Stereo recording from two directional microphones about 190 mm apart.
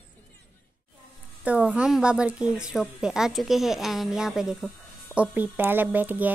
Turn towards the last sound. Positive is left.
turn(degrees=-10)  # may be behind; listen again after turning